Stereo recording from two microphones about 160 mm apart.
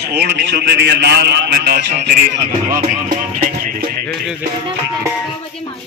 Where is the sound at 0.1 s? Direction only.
90° right.